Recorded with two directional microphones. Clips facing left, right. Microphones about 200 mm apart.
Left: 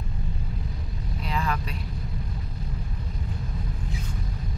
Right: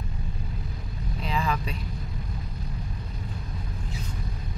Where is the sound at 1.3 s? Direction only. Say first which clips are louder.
Right 1 dB; centre (ahead or behind).